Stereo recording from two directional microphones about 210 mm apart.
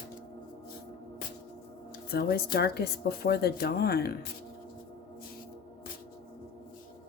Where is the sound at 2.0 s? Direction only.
50° left (ahead or behind).